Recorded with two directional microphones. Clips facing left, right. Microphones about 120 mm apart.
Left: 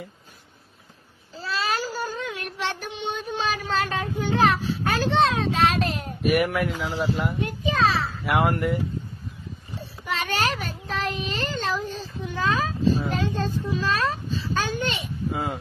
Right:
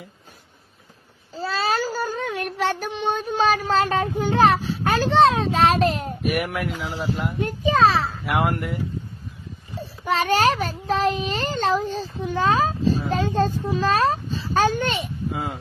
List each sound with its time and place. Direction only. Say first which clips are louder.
1.3 s child singing: right 4 dB; 35° right (ahead or behind)
6.2 s speech: left 4 dB; centre (ahead or behind)
7.4 s a sound: right 7 dB; 40° right (ahead or behind)
8.3 s speech: left 2 dB; centre (ahead or behind)
10.0 s a child's voice: right 7 dB; 35° right (ahead or behind)
15.3 s speech: left 2 dB; centre (ahead or behind)